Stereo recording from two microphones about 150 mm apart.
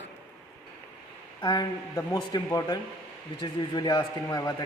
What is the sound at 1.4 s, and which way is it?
Speech, 25° left (ahead or behind).